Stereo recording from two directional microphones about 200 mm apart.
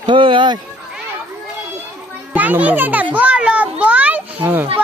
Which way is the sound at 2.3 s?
10° right (ahead or behind).